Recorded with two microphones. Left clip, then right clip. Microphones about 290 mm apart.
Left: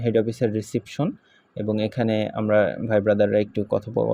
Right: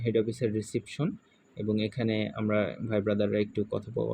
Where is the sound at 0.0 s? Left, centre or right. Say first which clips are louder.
Left 7 dB; centre.